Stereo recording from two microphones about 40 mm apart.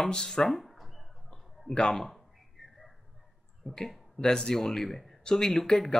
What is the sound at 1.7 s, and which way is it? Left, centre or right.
Speech, left.